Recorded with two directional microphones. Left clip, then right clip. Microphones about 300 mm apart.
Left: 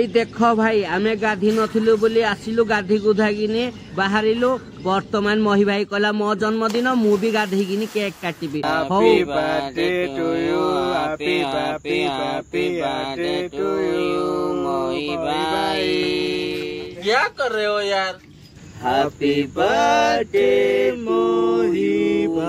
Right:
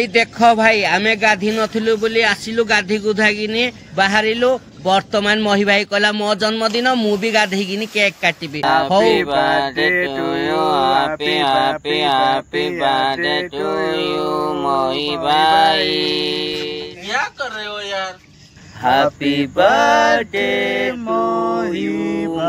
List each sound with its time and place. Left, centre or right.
0.0 s a man's voice: right
10.2 s mantra: right
11.2 s a man's voice: right
19.2 s mantra: right
19.7 s a sound: centre
20.2 s a man's voice: right
21.1 s a sound: centre